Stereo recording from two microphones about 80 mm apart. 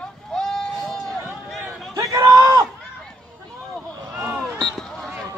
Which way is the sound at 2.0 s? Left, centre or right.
Right.